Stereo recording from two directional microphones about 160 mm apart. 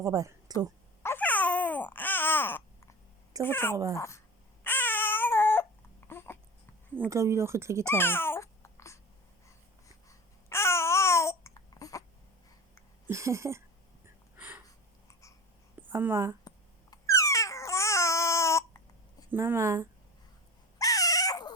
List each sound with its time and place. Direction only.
0.0 s a woman's voice: 20° right (ahead or behind)
1.0 s babbling: 10° left (ahead or behind)
3.4 s speech: 15° left (ahead or behind)
4.6 s baby cry: 15° left (ahead or behind)
6.1 s babbling: 15° left (ahead or behind)
7.1 s speech: 15° right (ahead or behind)
7.9 s babbling: 15° left (ahead or behind)
10.1 s babbling: 15° left (ahead or behind)
13.1 s speech: 20° right (ahead or behind)
14.3 s a sound: 10° right (ahead or behind)
15.9 s speech: 15° right (ahead or behind)
16.9 s babbling: 20° left (ahead or behind)
19.3 s speech: 15° right (ahead or behind)
20.7 s dog: 20° left (ahead or behind)